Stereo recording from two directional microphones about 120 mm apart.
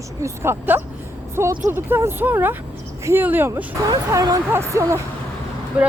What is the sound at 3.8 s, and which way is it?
Speech, 30° right (ahead or behind).